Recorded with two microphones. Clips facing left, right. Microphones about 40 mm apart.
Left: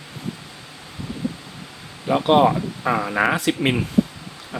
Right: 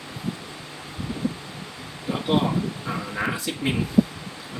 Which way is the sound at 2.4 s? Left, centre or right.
Left.